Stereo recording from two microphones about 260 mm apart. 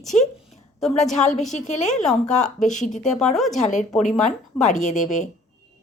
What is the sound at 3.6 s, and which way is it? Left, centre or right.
Speech, left.